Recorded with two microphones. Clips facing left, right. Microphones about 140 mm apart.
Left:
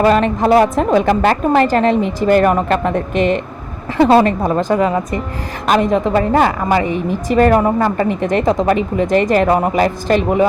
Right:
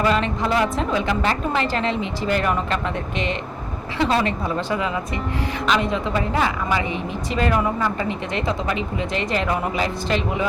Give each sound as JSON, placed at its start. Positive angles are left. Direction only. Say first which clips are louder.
{"t": 0.0, "sound": "a woman's voice", "louder": "left 8 dB", "side_deg": 50}